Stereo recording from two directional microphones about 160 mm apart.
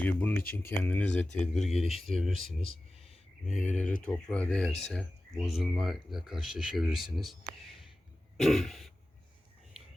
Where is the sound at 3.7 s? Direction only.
5° left (ahead or behind).